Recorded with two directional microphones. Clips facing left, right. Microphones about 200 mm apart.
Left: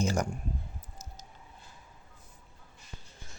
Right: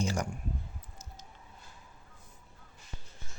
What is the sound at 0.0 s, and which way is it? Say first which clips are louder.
Speech: left 3 dB; 45° left (ahead or behind).